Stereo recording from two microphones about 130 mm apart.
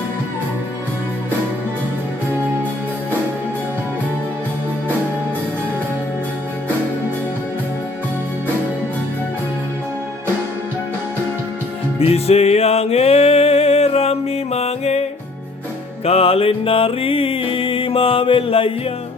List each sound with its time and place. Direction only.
11.9 s music: 50° left (ahead or behind)
16.0 s music: 50° left (ahead or behind)